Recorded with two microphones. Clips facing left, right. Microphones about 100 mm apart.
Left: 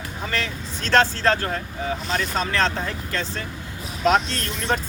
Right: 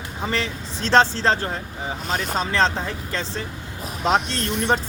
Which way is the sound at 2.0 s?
50° right (ahead or behind).